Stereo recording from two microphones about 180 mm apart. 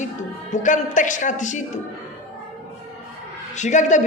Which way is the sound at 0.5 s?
45° left (ahead or behind).